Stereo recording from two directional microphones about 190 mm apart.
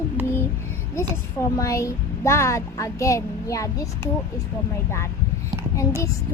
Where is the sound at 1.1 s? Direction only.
15° left (ahead or behind).